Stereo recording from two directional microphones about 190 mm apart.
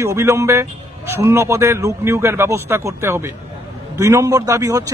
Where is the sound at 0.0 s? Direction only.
15° right (ahead or behind).